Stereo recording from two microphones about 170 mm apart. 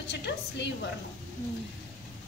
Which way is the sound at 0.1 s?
85° left.